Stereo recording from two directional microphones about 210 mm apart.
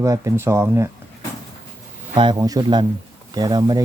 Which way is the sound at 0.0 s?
15° right (ahead or behind).